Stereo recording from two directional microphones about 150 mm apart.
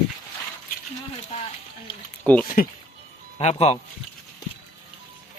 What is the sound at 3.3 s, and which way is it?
Speech, 45° left (ahead or behind).